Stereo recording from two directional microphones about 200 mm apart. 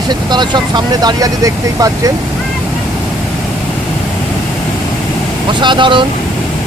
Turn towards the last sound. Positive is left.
turn(degrees=-25)  # may be behind; listen again after turning